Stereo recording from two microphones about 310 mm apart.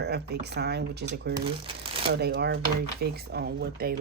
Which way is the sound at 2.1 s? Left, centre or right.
Right.